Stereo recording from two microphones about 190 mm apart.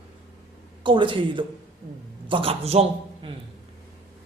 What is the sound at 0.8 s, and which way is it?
A man's voice, 25° right (ahead or behind).